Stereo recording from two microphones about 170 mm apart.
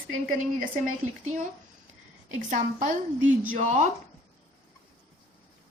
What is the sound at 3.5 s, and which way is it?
Speech, 45° right (ahead or behind).